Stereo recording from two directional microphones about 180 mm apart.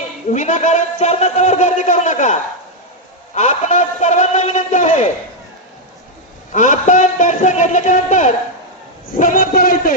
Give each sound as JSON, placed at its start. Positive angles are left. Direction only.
{"t": 0.3, "sound": "a man's voice", "side_deg": 40}
{"t": 6.5, "sound": "a man's voice", "side_deg": 45}